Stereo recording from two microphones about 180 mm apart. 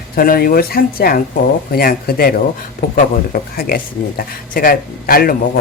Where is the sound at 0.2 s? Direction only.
55° left (ahead or behind).